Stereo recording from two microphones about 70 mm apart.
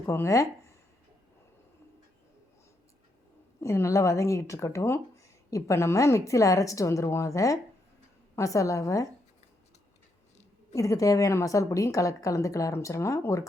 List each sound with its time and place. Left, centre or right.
0.0 s speech: left
3.6 s speech: left
10.8 s speech: left